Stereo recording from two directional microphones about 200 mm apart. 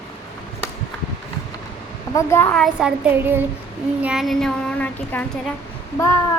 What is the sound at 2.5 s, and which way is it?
Child singing, centre (ahead or behind).